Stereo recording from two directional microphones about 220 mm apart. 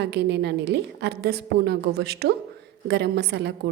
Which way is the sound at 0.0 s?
50° right (ahead or behind).